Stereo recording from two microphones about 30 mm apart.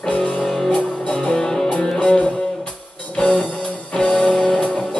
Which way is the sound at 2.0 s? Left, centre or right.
Left.